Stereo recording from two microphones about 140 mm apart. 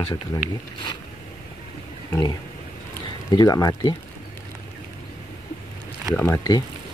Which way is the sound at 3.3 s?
25° left (ahead or behind).